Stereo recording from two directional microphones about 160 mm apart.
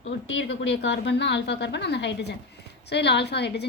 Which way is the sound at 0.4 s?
90° left.